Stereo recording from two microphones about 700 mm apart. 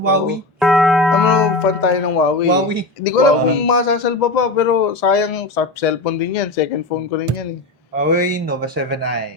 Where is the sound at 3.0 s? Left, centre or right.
Left.